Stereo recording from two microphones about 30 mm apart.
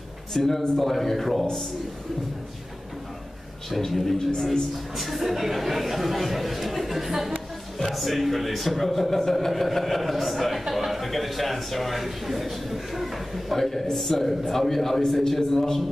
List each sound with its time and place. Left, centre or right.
0.3 s speech: centre
3.7 s a man's voice: centre
13.6 s a man's voice: centre